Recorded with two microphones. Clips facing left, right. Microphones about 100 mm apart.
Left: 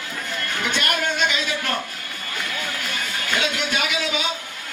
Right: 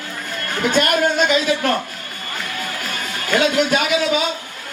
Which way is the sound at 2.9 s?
40° right (ahead or behind).